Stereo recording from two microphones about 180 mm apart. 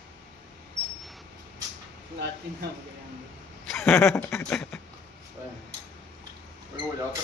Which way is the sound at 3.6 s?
5° left (ahead or behind).